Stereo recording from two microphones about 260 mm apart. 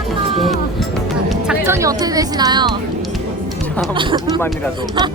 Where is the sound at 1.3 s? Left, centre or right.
Centre.